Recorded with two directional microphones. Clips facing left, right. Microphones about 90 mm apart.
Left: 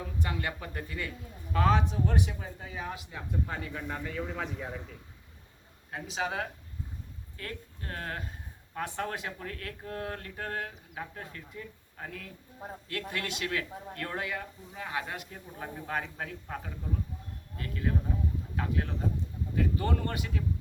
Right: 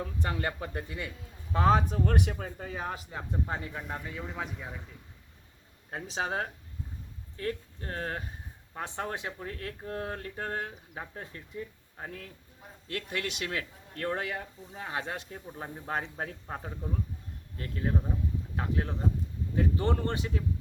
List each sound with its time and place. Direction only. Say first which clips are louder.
0.0 s speech: right 2 dB; 35° right (ahead or behind); by 1.1 s 20° right (ahead or behind)
1.5 s speech: right 2 dB; 35° right (ahead or behind)
2.0 s speech: right 2 dB; 60° right (ahead or behind); by 3.2 s 35° right (ahead or behind)
3.4 s speech: right 1 dB; 25° right (ahead or behind)
3.8 s a man's voice: left 2 dB; 10° right (ahead or behind)
5.9 s speech: right 1 dB; 35° right (ahead or behind)